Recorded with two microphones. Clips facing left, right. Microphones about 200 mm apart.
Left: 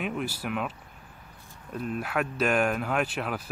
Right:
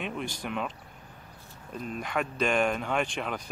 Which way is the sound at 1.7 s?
5° left (ahead or behind).